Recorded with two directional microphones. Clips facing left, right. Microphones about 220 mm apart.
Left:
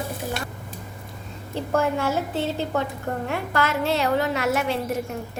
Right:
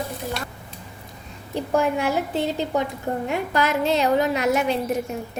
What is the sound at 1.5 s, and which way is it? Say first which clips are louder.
A woman's voice: right 2 dB; 15° right (ahead or behind).